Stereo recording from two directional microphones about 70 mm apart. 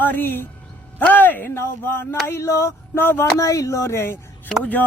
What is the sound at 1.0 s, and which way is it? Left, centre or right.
Speech, left.